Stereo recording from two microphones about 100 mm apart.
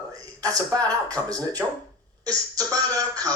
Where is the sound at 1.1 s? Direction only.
35° right (ahead or behind).